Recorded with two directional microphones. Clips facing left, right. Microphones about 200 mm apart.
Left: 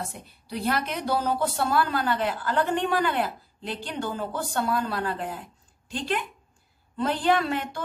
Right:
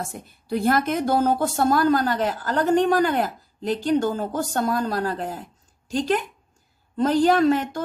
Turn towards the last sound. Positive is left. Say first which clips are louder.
# right 8 dB
turn(degrees=-40)  # may be behind; listen again after turning